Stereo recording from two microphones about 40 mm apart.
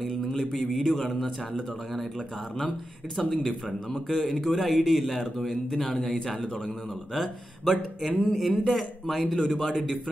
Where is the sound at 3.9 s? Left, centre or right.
Left.